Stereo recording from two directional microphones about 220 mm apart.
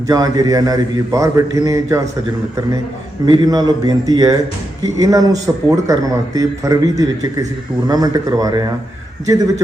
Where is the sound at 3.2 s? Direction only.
15° right (ahead or behind).